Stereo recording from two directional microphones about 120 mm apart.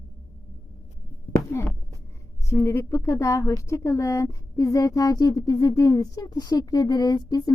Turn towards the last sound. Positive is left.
turn(degrees=30)  # may be behind; listen again after turning